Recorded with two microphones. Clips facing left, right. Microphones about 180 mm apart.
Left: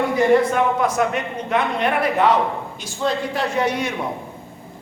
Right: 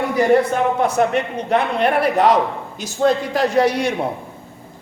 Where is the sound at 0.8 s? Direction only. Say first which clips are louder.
Right 3 dB; 30° right (ahead or behind).